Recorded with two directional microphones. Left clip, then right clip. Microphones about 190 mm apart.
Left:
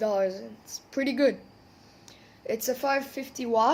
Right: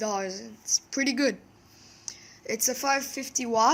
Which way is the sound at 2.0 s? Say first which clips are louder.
Left 1 dB; 35° right (ahead or behind).